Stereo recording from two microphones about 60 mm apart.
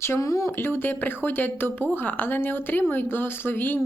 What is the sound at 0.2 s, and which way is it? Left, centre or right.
Speech, left.